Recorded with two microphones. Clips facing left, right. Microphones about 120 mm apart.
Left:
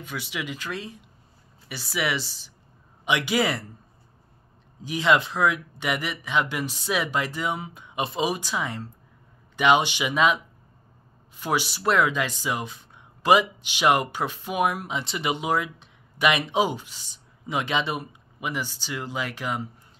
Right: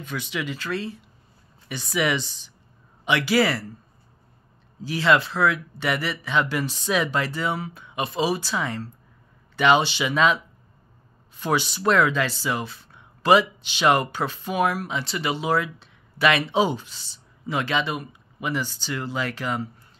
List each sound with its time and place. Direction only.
0.0 s speech: 10° left (ahead or behind)
3.1 s speech: 20° left (ahead or behind)
4.8 s speech: 15° left (ahead or behind)